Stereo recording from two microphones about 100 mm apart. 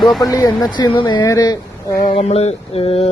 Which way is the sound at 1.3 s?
35° left (ahead or behind).